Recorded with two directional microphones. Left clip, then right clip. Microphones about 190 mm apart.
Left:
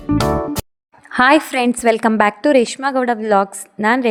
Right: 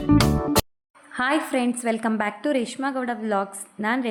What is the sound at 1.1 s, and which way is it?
A woman's voice, 50° left (ahead or behind).